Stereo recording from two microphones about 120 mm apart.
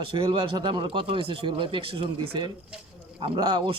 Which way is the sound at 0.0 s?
45° right (ahead or behind).